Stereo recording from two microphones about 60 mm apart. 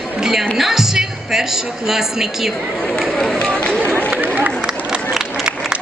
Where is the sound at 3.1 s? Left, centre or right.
Centre.